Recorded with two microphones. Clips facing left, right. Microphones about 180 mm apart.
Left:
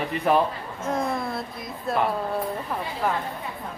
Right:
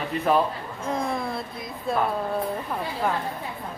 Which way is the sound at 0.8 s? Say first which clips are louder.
Left 1 dB; centre (ahead or behind).